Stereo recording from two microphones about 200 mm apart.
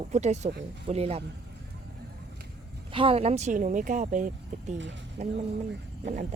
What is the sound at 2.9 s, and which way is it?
Speech, 25° right (ahead or behind).